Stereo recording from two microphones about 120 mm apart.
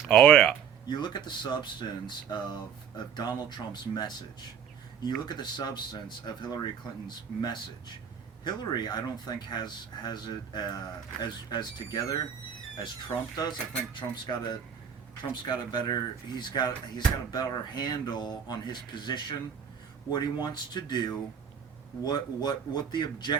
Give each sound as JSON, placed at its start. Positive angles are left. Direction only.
{"t": 0.1, "sound": "speech", "side_deg": 5}
{"t": 0.9, "sound": "speech", "side_deg": 40}
{"t": 8.4, "sound": "speech", "side_deg": 35}